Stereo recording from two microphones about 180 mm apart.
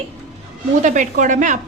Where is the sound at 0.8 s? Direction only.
45° right (ahead or behind).